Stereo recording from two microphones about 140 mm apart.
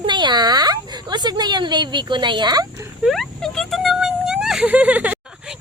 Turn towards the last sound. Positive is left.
turn(degrees=-5)  # may be behind; listen again after turning